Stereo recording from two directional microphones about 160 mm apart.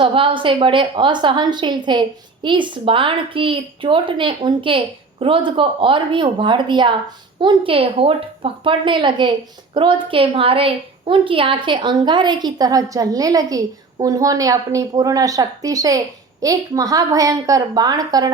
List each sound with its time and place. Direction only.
0.0 s a woman's voice: 35° right (ahead or behind)